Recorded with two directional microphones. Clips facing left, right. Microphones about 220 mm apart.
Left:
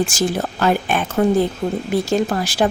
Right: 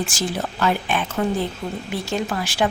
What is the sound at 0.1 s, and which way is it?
Speech, 45° left (ahead or behind).